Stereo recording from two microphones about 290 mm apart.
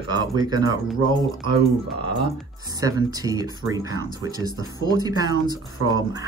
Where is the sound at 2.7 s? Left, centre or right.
Centre.